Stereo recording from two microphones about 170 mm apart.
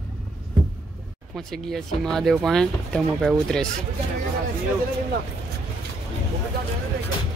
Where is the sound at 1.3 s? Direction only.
Centre (ahead or behind).